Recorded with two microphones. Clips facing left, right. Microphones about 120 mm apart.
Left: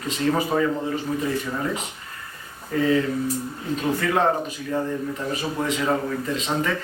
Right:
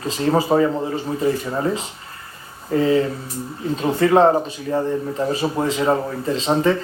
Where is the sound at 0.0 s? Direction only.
35° right (ahead or behind).